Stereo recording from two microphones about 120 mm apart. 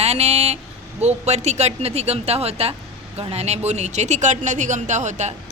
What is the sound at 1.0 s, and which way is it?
Speech, 70° right (ahead or behind).